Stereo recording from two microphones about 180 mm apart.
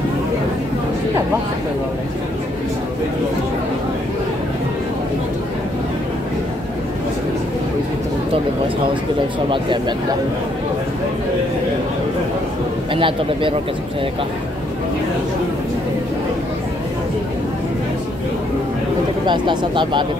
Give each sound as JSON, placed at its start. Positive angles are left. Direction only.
{"t": 9.5, "sound": "speech", "side_deg": -25}
{"t": 12.9, "sound": "speech", "side_deg": -30}
{"t": 19.2, "sound": "speech", "side_deg": -25}